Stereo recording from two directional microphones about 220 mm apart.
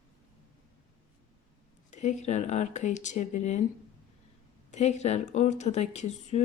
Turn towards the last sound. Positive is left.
turn(degrees=30)  # may be behind; listen again after turning